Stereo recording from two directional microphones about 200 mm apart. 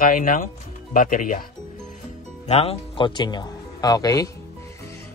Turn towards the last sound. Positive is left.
turn(degrees=20)  # may be behind; listen again after turning